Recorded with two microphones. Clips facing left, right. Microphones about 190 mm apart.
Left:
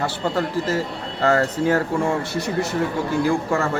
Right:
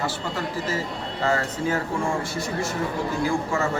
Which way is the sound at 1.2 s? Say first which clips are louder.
Left 6 dB; 65° left (ahead or behind).